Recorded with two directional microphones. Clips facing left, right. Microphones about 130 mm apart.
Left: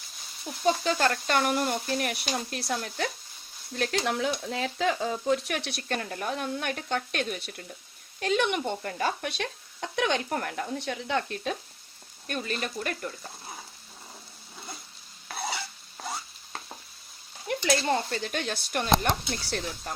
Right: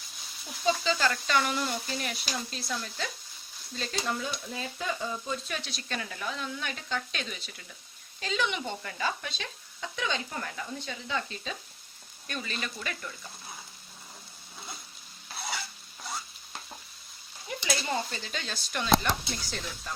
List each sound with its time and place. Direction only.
0.6 s speech: 55° left (ahead or behind)
12.3 s speech: 45° left (ahead or behind)
16.0 s stir: 50° left (ahead or behind)
17.5 s speech: 60° left (ahead or behind)